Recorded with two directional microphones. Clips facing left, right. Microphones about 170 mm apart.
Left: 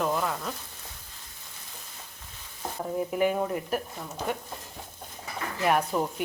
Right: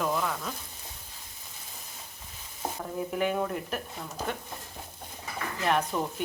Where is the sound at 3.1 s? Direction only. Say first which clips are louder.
Left 2 dB; 5° left (ahead or behind).